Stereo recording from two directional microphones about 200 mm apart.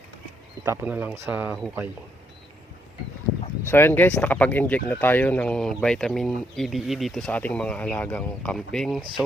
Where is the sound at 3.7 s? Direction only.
10° left (ahead or behind).